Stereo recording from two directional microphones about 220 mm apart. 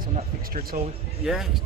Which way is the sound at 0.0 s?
40° right (ahead or behind).